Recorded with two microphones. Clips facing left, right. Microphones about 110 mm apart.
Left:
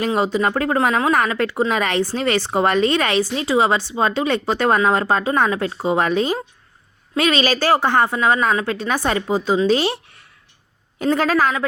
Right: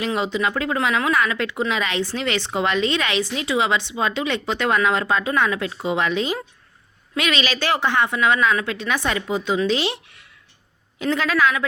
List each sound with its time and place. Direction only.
0.0 s a woman's voice: 40° left (ahead or behind)